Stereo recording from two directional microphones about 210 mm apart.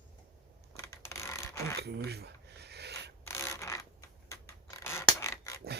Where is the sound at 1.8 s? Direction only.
50° right (ahead or behind).